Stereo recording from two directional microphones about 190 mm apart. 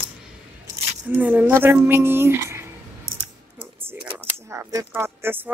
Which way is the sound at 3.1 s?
50° right (ahead or behind).